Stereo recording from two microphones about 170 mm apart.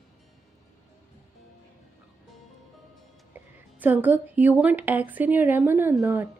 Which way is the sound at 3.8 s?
10° right (ahead or behind).